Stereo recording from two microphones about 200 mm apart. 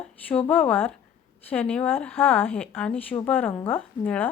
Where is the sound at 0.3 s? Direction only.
10° left (ahead or behind).